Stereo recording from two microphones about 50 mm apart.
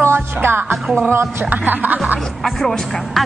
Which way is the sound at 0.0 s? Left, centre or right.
Right.